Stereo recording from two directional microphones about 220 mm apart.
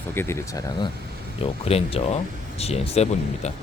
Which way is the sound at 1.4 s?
25° left (ahead or behind).